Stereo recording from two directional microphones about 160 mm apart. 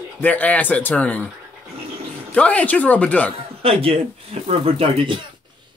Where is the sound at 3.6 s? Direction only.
35° right (ahead or behind).